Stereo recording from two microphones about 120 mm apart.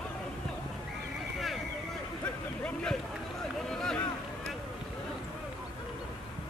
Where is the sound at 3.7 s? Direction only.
5° left (ahead or behind).